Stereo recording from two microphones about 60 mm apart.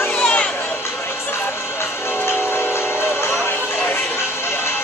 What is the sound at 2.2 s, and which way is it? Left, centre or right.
Train, left.